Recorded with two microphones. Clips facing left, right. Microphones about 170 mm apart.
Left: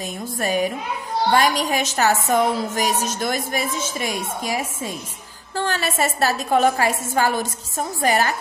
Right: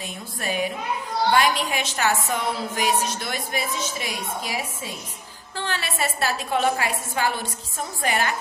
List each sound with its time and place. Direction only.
0.4 s a woman's voice: 45° left (ahead or behind)